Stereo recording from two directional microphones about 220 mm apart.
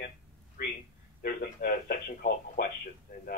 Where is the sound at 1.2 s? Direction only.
40° left (ahead or behind).